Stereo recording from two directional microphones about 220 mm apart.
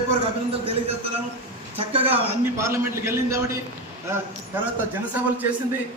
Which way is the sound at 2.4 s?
10° right (ahead or behind).